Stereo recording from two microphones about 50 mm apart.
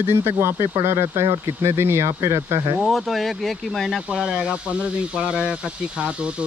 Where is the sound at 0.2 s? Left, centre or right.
Right.